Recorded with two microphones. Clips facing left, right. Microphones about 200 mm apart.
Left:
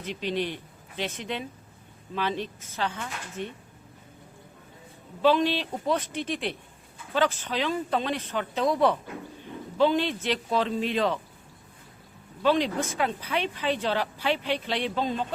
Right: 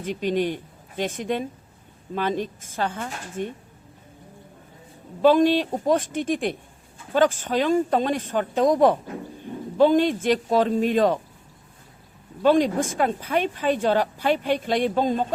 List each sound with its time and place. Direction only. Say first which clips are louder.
0.0 s speech: right 6 dB; 45° right (ahead or behind)
5.2 s speech: right 6 dB; 45° right (ahead or behind)
12.4 s speech: right 5 dB; 45° right (ahead or behind)